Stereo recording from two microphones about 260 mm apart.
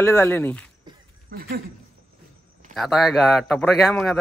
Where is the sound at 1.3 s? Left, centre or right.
Right.